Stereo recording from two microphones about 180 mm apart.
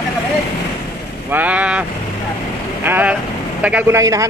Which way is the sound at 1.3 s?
10° right (ahead or behind).